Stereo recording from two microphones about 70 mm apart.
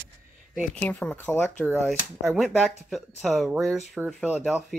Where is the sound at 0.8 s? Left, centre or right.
Left.